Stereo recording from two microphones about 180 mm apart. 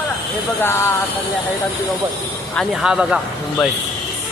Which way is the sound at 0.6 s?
15° left (ahead or behind).